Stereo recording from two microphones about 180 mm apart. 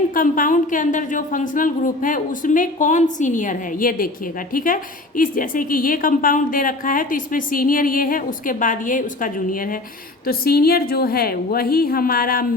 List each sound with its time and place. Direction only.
0.1 s a woman's voice: 50° left (ahead or behind)